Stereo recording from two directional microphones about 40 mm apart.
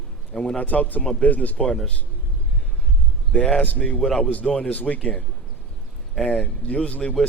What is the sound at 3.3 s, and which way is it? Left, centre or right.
Speech, left.